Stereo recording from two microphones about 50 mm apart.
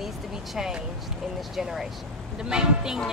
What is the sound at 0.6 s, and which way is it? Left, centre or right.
Speech, centre.